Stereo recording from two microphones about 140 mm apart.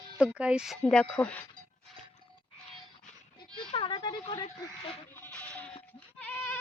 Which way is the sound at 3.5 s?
35° left (ahead or behind).